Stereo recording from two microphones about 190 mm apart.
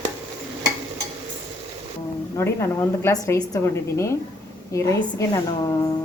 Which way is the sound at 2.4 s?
15° left (ahead or behind).